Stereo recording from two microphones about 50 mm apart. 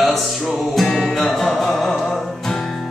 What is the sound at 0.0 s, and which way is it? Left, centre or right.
Music, centre.